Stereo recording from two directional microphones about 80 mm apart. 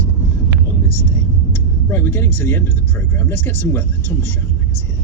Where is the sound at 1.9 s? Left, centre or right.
Left.